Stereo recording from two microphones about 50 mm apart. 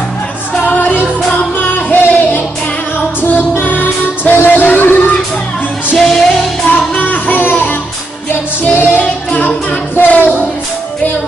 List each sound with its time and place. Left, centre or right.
0.7 s music: left
3.5 s music: left
5.9 s music: centre
6.7 s music: left